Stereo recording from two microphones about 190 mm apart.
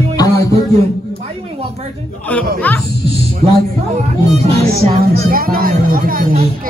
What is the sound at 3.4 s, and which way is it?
Speech, 30° right (ahead or behind).